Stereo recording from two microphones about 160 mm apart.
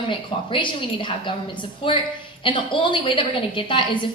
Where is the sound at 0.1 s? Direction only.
30° left (ahead or behind).